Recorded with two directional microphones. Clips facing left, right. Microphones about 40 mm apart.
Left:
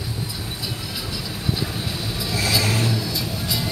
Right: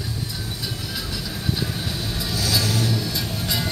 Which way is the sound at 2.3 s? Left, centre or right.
Left.